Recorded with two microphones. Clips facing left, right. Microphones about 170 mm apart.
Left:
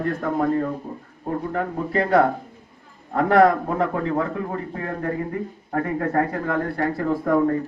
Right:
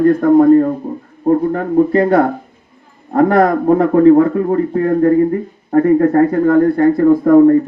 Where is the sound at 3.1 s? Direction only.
40° right (ahead or behind).